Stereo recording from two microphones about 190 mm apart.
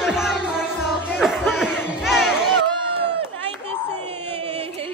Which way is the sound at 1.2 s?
Centre (ahead or behind).